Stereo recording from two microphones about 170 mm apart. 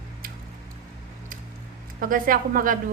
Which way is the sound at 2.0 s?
55° right (ahead or behind).